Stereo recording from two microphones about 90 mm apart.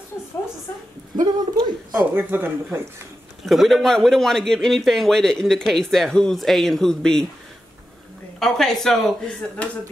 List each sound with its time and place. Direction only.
1.2 s speech: 50° right (ahead or behind)
2.1 s speech: 25° right (ahead or behind)
3.4 s a man's voice: centre (ahead or behind)
8.4 s a man's voice: 5° left (ahead or behind)